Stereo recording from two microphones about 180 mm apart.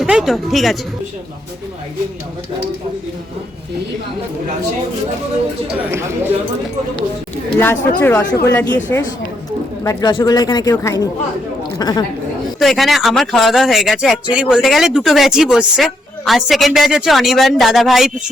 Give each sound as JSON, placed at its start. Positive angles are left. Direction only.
{"t": 0.0, "sound": "speech", "side_deg": -5}
{"t": 5.9, "sound": "speech", "side_deg": -15}
{"t": 7.6, "sound": "speech", "side_deg": 10}
{"t": 9.8, "sound": "speech", "side_deg": 20}
{"t": 12.5, "sound": "speech", "side_deg": 0}